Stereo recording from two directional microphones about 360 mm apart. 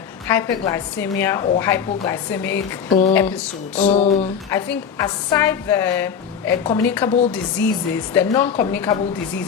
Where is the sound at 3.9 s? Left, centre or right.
Centre.